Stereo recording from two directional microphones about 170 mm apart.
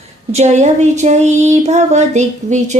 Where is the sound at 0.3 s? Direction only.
40° right (ahead or behind).